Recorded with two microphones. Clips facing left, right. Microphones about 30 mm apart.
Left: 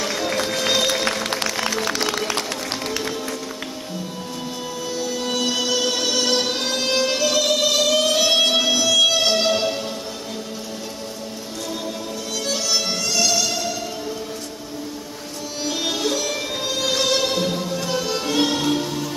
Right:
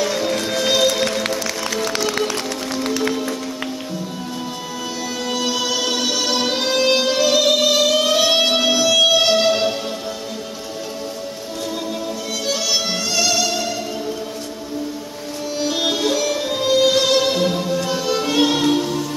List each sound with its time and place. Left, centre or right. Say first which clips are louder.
0.0 s music: right 3 dB; centre
1.3 s music: even; left
5.3 s music: right 1 dB; centre
12.5 s music: right 1 dB; centre
15.6 s music: right 3 dB; centre